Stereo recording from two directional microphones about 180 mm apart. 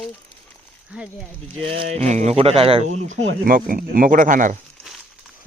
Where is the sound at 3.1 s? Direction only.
90° right.